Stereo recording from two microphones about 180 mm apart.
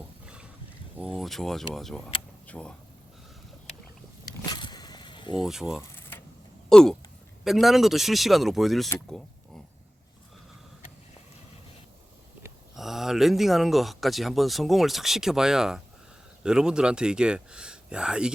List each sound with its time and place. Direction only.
0.9 s speech: 5° right (ahead or behind)
4.4 s vehicle: 25° left (ahead or behind)
5.4 s speech: centre (ahead or behind)
12.7 s speech: centre (ahead or behind)